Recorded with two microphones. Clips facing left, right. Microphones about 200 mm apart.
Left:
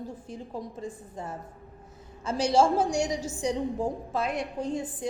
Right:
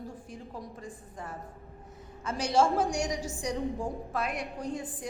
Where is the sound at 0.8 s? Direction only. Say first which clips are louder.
Left 5 dB; 25° left (ahead or behind).